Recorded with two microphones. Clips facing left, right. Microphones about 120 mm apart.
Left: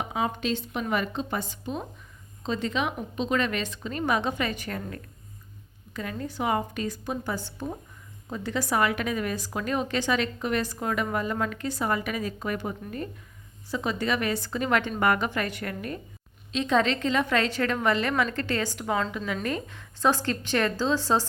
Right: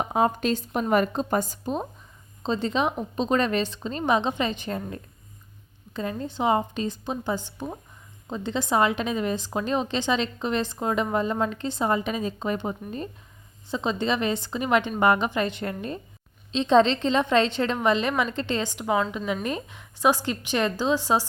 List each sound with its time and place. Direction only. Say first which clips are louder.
0.0 s a woman's voice: right 5 dB; 45° right (ahead or behind); by 21.2 s 15° right (ahead or behind)